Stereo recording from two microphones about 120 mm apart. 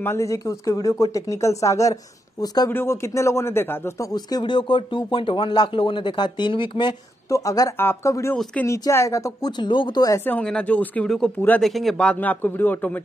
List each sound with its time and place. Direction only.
0.0 s speech: 25° left (ahead or behind)
2.7 s speech: 20° left (ahead or behind)
4.1 s speech: 35° left (ahead or behind)
7.2 s speech: 25° left (ahead or behind)
9.6 s speech: 40° left (ahead or behind)
10.2 s speech: 10° left (ahead or behind)